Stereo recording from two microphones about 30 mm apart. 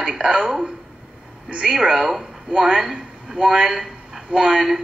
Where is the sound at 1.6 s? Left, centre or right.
Centre.